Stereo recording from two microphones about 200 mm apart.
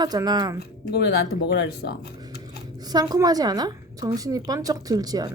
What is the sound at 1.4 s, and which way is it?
Speech, 55° left (ahead or behind).